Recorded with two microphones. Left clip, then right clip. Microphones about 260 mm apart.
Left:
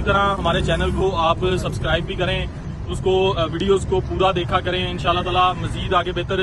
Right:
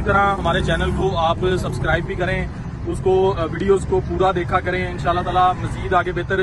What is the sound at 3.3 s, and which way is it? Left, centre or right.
Speech, centre.